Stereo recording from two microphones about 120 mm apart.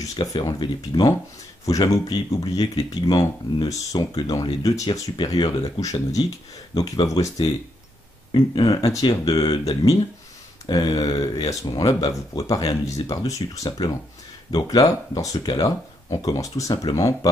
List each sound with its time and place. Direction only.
0.0 s speech: 30° left (ahead or behind)
8.3 s speech: 35° left (ahead or behind)